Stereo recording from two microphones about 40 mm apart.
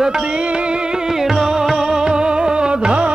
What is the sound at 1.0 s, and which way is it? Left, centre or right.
Music, centre.